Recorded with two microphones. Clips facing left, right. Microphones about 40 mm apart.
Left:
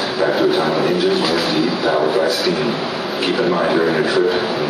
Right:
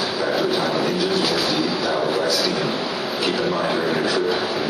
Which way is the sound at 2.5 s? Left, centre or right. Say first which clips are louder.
Left 4 dB; centre.